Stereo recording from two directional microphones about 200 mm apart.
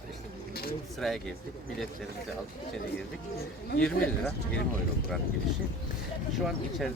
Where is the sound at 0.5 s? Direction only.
50° left (ahead or behind).